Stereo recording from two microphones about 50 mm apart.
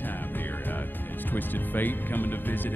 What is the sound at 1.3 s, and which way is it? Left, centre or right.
Music, left.